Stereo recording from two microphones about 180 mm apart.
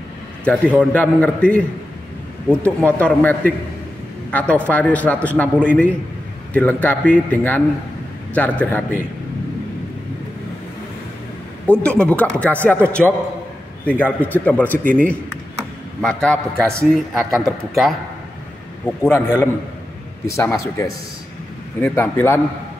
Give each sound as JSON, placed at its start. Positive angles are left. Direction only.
{"t": 0.5, "sound": "a man's voice", "side_deg": 10}
{"t": 11.8, "sound": "a man's voice", "side_deg": 5}
{"t": 18.9, "sound": "a man's voice", "side_deg": 15}